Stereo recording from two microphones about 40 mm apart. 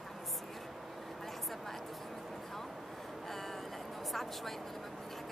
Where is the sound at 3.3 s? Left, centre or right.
Centre.